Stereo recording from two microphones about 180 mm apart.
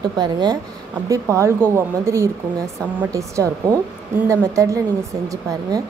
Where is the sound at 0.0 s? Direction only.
25° right (ahead or behind).